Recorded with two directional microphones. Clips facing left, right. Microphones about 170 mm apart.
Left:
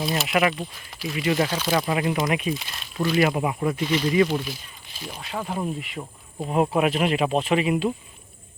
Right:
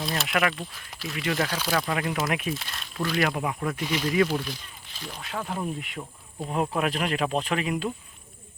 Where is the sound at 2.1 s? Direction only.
5° right (ahead or behind).